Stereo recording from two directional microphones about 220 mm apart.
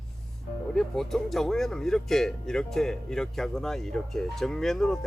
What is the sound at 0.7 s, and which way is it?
Speech, centre (ahead or behind).